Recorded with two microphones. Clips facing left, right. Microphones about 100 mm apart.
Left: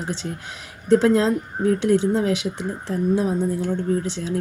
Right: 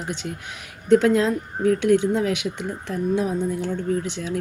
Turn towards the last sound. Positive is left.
turn(degrees=35)  # may be behind; listen again after turning